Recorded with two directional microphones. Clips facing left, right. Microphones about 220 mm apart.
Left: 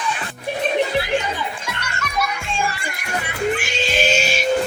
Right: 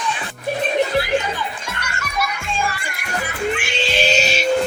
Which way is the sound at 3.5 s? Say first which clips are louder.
Even; 45° left (ahead or behind).